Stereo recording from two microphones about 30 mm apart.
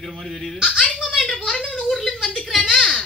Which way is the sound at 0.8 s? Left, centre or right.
Left.